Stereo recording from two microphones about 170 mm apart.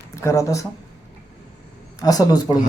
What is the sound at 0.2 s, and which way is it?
Speech, 20° left (ahead or behind).